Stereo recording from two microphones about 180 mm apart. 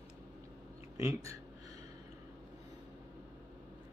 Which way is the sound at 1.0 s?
15° right (ahead or behind).